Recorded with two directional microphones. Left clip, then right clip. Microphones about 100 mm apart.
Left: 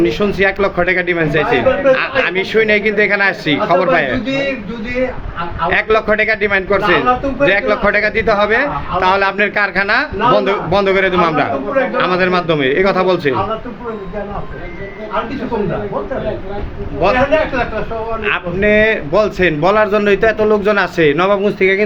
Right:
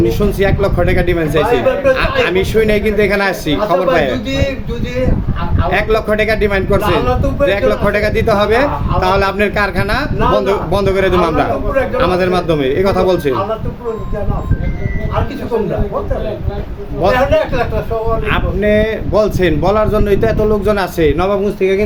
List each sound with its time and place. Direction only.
0.0 s speech: 40° right (ahead or behind)
5.6 s speech: 35° right (ahead or behind)
17.0 s a man's voice: 45° right (ahead or behind)
18.3 s speech: 50° right (ahead or behind)
21.4 s speech: 10° right (ahead or behind)